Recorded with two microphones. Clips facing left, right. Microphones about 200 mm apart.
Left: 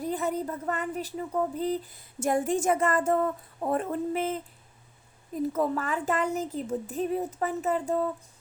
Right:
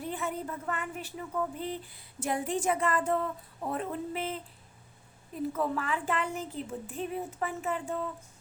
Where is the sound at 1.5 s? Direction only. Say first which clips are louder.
Left 7 dB; 40° left (ahead or behind).